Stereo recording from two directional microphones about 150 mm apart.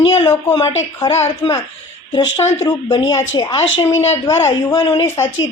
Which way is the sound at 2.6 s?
25° left (ahead or behind).